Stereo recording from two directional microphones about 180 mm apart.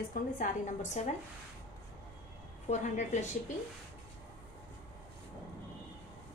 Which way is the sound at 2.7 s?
40° left (ahead or behind).